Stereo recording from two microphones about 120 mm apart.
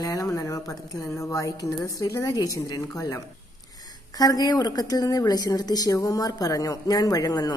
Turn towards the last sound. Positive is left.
turn(degrees=35)  # may be behind; listen again after turning